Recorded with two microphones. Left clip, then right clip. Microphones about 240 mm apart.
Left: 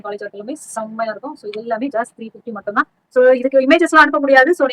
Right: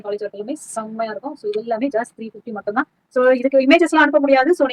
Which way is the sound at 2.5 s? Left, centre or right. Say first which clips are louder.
Left 3 dB; left.